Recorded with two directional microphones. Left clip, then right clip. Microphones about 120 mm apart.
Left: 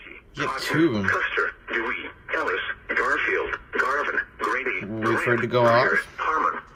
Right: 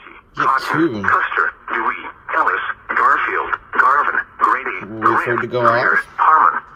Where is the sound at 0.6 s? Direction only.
20° right (ahead or behind).